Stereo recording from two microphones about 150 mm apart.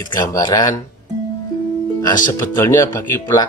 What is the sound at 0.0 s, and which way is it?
Speech, 25° left (ahead or behind).